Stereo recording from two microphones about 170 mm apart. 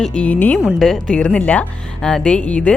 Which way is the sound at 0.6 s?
5° right (ahead or behind).